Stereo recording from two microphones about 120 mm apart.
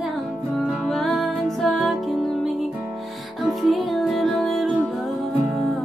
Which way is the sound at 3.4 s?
Centre (ahead or behind).